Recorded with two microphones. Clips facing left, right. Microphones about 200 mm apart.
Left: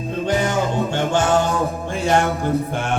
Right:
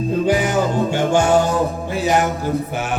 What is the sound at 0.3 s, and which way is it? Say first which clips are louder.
Music: even; 10° right (ahead or behind).